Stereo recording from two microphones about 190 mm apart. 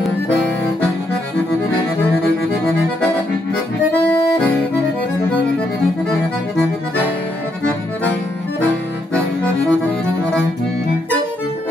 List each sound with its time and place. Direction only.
9.1 s accordion: 5° left (ahead or behind)